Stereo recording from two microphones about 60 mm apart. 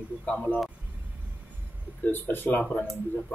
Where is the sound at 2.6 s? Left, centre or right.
Centre.